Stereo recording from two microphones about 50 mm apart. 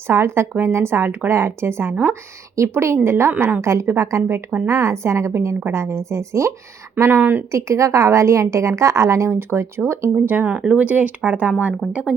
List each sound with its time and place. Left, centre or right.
0.1 s a woman's voice: right
3.6 s a woman's voice: right
7.1 s speech: right
7.5 s a woman's voice: right
9.3 s a woman's voice: right
10.2 s speech: right
11.8 s speech: centre